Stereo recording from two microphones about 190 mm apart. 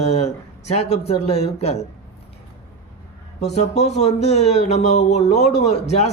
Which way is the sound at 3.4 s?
35° left (ahead or behind).